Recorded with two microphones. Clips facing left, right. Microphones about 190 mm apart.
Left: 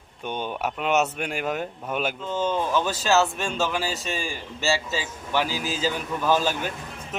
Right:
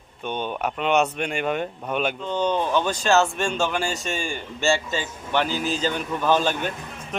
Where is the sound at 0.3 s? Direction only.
10° left (ahead or behind).